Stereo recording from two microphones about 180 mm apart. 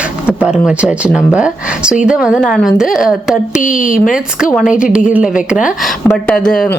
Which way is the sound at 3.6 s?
50° left (ahead or behind).